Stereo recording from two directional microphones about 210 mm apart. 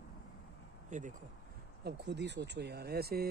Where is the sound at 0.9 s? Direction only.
35° right (ahead or behind).